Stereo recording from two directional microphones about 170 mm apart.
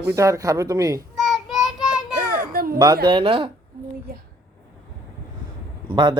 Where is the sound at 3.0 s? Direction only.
30° right (ahead or behind).